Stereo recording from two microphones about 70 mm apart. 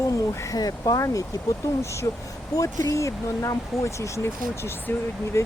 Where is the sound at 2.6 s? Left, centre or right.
Left.